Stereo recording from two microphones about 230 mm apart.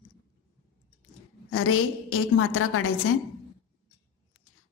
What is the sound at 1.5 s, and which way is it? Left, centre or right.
A woman's voice, left.